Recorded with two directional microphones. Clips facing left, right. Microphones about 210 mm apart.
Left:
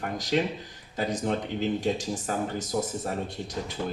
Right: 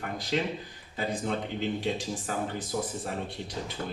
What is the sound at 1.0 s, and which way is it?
Speech, 40° left (ahead or behind).